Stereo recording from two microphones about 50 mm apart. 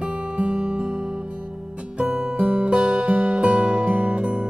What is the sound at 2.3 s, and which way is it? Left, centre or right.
Music, right.